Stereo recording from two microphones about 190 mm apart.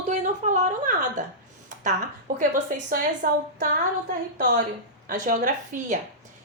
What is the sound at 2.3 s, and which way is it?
A woman's voice, 45° right (ahead or behind).